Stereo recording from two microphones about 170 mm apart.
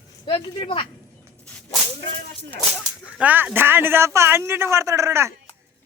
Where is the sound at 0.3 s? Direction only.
30° left (ahead or behind).